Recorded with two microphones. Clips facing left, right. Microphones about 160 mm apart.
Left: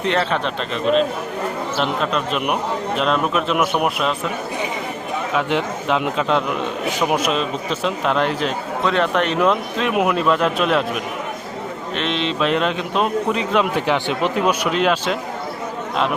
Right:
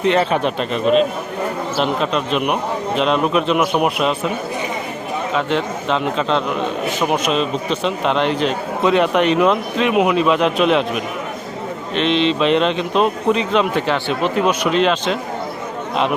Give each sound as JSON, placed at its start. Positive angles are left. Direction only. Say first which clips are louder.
{"t": 0.1, "sound": "a man's voice", "louder": "right 2 dB", "side_deg": -10}
{"t": 5.3, "sound": "a man's voice", "louder": "right 1 dB", "side_deg": 10}
{"t": 8.8, "sound": "a man's voice", "louder": "right 4 dB", "side_deg": -10}
{"t": 11.9, "sound": "a man's voice", "louder": "right 6 dB", "side_deg": 0}